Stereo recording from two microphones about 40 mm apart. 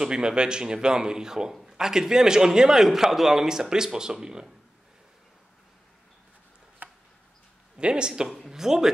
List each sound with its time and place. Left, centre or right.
0.0 s a man's voice: centre
6.8 s a sound: right
7.7 s speech: right
8.5 s speech: centre